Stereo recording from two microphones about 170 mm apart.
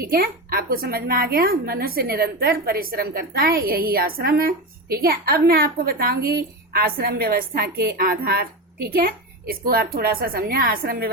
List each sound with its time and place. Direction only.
0.0 s a woman's voice: 60° right (ahead or behind)